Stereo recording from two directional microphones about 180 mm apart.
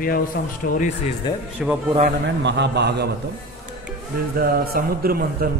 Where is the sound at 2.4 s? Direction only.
70° right (ahead or behind).